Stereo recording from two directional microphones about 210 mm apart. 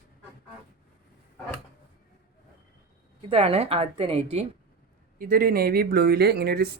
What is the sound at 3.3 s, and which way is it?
A woman's voice, 30° right (ahead or behind).